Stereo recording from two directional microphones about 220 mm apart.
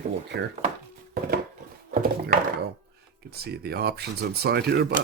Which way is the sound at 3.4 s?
45° right (ahead or behind).